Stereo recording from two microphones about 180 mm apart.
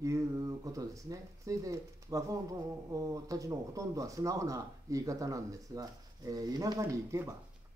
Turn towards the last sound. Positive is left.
turn(degrees=-15)  # may be behind; listen again after turning